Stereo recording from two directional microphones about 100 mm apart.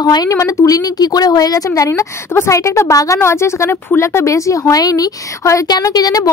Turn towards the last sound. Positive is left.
turn(degrees=40)  # may be behind; listen again after turning